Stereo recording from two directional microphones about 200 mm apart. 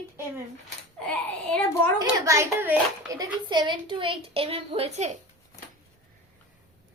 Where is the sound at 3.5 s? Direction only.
20° right (ahead or behind).